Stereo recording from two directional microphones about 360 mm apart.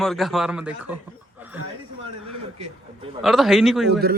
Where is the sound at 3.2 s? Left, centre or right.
Centre.